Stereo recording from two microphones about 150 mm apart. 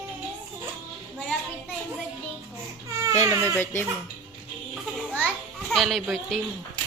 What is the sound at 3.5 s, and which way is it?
Speech, 15° left (ahead or behind).